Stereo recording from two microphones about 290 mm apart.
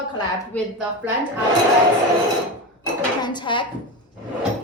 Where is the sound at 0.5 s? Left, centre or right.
Centre.